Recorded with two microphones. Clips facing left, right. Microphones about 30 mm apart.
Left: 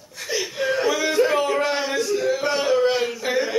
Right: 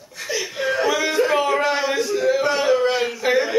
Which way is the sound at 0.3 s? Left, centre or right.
Centre.